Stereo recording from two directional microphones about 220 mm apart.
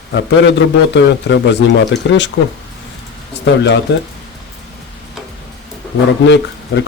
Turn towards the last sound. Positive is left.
turn(degrees=55)  # may be behind; listen again after turning